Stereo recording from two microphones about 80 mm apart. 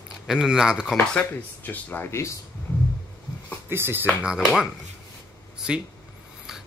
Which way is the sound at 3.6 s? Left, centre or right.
Right.